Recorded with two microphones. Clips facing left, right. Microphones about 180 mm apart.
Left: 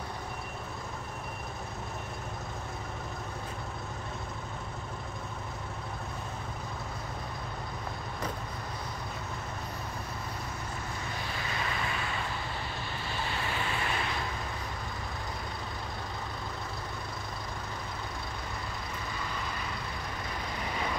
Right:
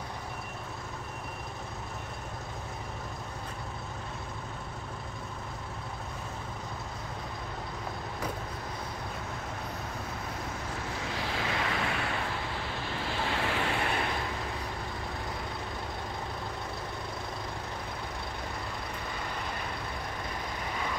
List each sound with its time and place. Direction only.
11.1 s vehicle: 90° right; by 12.1 s 70° right (ahead or behind)
13.2 s vehicle: 85° right; by 14.0 s 60° right (ahead or behind)